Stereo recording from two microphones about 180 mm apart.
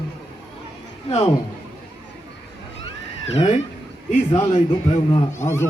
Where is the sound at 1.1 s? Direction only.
20° left (ahead or behind).